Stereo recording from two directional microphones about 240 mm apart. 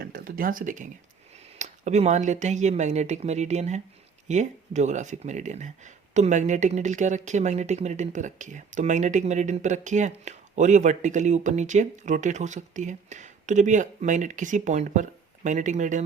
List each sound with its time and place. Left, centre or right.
0.0 s speech: right